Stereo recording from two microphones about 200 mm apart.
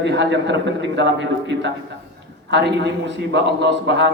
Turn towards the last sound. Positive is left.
turn(degrees=-65)  # may be behind; listen again after turning